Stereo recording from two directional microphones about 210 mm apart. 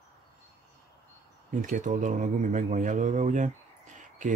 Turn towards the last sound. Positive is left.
turn(degrees=-35)  # may be behind; listen again after turning